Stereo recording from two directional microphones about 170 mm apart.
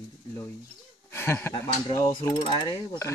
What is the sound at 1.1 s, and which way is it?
Speech, 15° left (ahead or behind).